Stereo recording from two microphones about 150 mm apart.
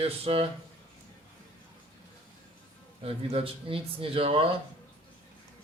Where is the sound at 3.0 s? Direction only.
40° right (ahead or behind).